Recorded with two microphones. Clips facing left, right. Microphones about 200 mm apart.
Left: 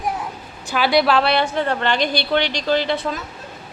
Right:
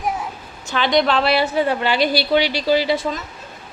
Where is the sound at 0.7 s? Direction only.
5° left (ahead or behind).